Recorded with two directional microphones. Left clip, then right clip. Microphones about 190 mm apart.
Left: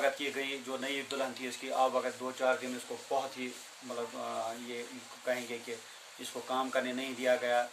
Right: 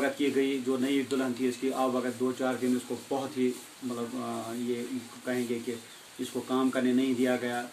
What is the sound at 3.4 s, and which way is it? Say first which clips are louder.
Speech: right 11 dB; 15° left (ahead or behind).